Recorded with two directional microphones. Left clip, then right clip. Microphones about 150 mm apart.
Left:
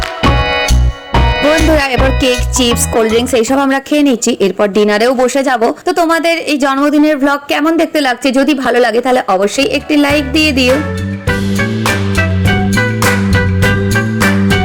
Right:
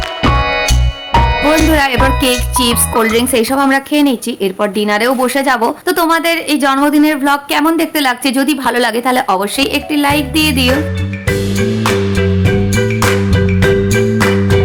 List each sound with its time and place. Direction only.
0.2 s music: centre (ahead or behind)
1.7 s music: 30° left (ahead or behind)
3.0 s speech: 15° left (ahead or behind)
11.5 s music: centre (ahead or behind)